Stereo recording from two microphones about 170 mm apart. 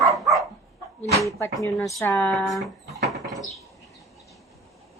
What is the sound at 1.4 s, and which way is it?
Speech, 20° left (ahead or behind).